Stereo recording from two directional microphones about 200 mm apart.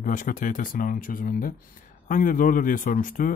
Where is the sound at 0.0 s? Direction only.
40° left (ahead or behind).